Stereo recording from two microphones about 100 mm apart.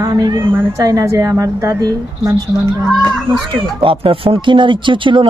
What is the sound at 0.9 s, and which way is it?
A woman's voice, 35° right (ahead or behind).